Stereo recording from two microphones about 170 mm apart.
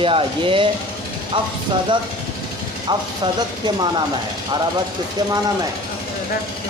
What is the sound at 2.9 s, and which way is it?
Speech, 25° right (ahead or behind).